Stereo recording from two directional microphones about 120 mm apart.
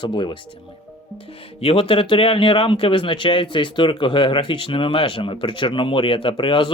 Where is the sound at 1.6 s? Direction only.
50° left (ahead or behind).